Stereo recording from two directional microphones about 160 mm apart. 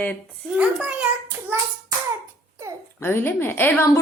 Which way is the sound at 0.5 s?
10° right (ahead or behind).